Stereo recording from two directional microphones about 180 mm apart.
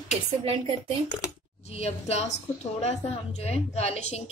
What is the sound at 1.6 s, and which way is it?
A woman's voice, 35° left (ahead or behind).